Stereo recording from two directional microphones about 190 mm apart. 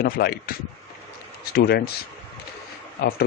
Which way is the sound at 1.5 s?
55° left (ahead or behind).